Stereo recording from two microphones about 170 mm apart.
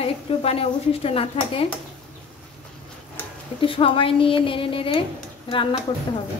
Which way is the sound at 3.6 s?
30° left (ahead or behind).